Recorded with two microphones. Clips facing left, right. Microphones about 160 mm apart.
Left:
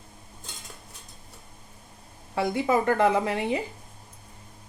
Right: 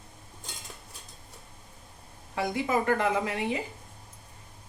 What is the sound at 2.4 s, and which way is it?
Speech, 30° left (ahead or behind).